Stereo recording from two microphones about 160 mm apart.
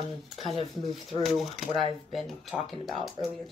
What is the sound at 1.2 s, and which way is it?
Speech, centre (ahead or behind).